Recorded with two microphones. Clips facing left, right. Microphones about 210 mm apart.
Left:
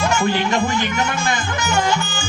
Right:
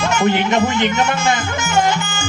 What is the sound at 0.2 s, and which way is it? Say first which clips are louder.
Speech: right 3 dB; 20° right (ahead or behind).